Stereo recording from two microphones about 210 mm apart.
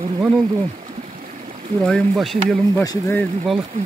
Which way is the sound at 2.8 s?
15° left (ahead or behind).